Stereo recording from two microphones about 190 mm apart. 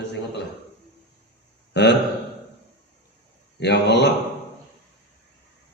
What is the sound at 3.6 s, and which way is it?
Speech, 60° left (ahead or behind).